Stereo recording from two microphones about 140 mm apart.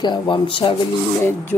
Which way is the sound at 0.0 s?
35° left (ahead or behind).